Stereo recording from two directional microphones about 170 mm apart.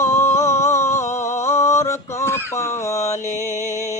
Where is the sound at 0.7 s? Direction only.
45° left (ahead or behind).